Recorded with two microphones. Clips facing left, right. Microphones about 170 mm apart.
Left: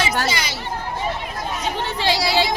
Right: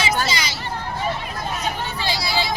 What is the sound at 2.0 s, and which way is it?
Vehicle, 90° left.